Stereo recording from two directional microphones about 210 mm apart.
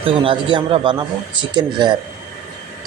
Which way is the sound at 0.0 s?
25° right (ahead or behind).